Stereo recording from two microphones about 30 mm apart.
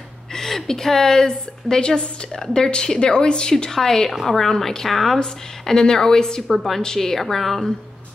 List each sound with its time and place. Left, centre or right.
0.3 s a woman's voice: centre; by 3.7 s left
3.7 s a woman's voice: centre
5.2 s a woman's voice: centre
7.0 s a woman's voice: centre